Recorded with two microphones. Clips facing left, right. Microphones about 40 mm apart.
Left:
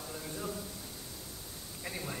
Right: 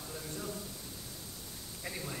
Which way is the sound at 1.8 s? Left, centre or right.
Centre.